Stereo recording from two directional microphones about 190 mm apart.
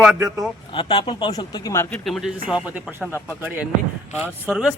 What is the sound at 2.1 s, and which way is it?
Speech, centre (ahead or behind).